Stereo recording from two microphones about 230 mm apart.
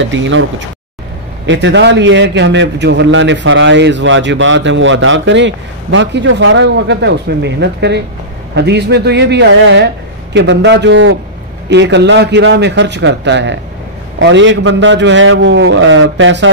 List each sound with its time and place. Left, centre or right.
0.0 s a man's voice: right